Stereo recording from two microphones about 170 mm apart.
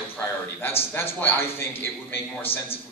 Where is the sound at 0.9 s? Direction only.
15° left (ahead or behind).